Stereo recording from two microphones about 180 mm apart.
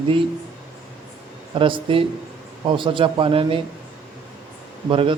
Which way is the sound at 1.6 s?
30° right (ahead or behind).